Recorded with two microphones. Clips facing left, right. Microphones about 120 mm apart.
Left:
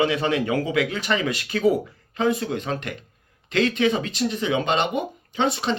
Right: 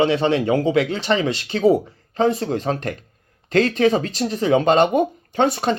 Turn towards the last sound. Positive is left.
turn(degrees=-45)  # may be behind; listen again after turning